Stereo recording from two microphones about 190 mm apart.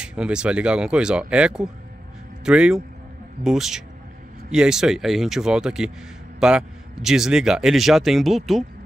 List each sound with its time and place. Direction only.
0.0 s a man's voice: 5° right (ahead or behind)